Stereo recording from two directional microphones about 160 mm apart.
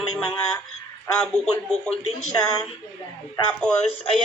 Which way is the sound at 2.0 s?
45° left (ahead or behind).